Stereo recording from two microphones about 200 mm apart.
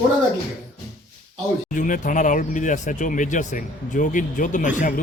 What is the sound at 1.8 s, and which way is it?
Speech, 40° left (ahead or behind).